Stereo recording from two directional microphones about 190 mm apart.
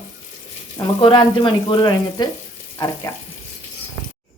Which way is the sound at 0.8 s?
25° left (ahead or behind).